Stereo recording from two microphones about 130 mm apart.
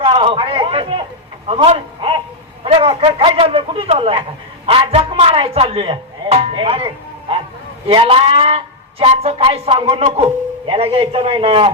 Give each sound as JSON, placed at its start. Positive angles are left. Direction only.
{"t": 0.0, "sound": "a man's voice", "side_deg": -40}
{"t": 2.6, "sound": "a sound", "side_deg": -45}
{"t": 3.0, "sound": "speech", "side_deg": -45}